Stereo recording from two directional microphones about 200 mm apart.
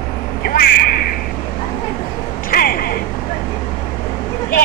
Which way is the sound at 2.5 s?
50° left (ahead or behind).